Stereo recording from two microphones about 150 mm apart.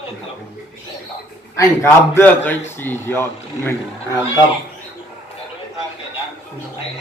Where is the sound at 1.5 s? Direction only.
15° left (ahead or behind).